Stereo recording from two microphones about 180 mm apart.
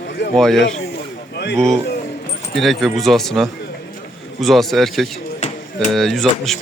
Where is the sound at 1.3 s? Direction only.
70° left (ahead or behind).